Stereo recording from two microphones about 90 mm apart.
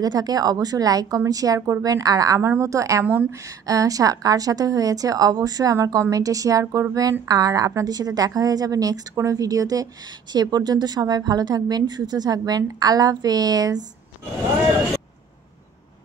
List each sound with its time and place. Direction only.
0.0 s a woman's voice: 45° right (ahead or behind)